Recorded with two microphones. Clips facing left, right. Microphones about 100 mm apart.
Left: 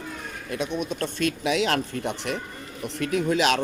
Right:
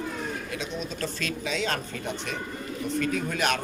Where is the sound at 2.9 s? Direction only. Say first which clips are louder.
Left 4 dB; 90° left.